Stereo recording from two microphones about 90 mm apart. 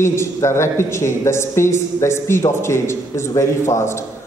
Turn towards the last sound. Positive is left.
turn(degrees=30)  # may be behind; listen again after turning